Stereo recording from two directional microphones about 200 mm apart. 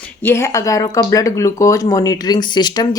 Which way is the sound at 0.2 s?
10° left (ahead or behind).